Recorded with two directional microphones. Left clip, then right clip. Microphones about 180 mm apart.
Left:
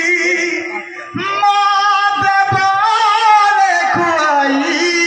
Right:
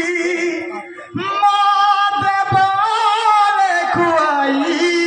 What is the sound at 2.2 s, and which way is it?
Music, 20° left (ahead or behind).